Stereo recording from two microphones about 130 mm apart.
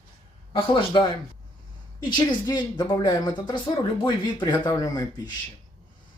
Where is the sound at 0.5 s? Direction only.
40° left (ahead or behind).